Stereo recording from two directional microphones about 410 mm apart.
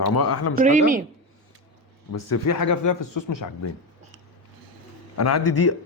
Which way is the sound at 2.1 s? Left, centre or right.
Left.